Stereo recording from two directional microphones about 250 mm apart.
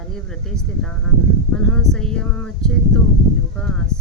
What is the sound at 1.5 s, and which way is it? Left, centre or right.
Speech, centre.